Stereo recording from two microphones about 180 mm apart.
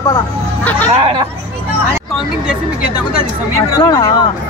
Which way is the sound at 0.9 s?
30° right (ahead or behind).